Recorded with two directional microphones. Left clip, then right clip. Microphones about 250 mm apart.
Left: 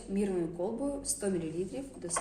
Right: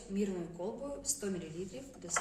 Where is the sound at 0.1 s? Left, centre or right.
Left.